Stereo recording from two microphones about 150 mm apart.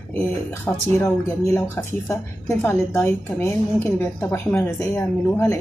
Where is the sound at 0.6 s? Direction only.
10° left (ahead or behind).